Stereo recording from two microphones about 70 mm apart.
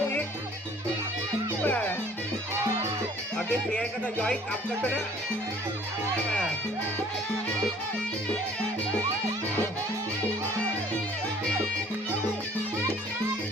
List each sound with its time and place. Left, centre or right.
1.6 s music: left
3.3 s speech: centre